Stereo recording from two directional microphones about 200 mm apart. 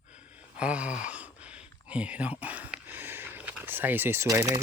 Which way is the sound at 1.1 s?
5° right (ahead or behind).